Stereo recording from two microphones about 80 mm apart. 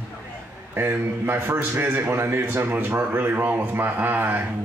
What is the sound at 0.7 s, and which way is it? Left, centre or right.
A man's voice, right.